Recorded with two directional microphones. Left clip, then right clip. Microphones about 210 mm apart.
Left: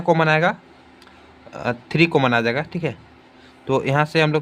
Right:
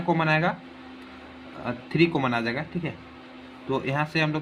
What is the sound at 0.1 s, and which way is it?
Speech, 35° left (ahead or behind).